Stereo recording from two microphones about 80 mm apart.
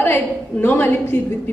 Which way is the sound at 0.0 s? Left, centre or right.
Left.